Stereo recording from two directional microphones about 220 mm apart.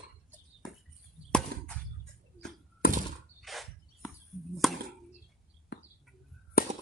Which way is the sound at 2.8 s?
40° left (ahead or behind).